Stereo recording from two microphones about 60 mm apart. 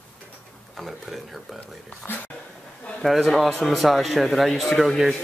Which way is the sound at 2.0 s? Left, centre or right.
Left.